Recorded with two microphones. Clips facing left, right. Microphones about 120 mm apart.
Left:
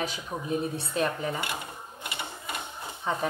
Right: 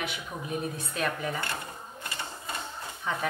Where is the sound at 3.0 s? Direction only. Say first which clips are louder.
Left 2 dB; 30° left (ahead or behind).